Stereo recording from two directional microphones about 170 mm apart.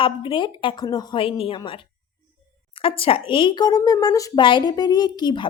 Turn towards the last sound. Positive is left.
turn(degrees=25)  # may be behind; listen again after turning